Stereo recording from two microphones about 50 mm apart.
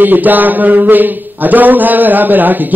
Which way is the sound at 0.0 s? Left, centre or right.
Right.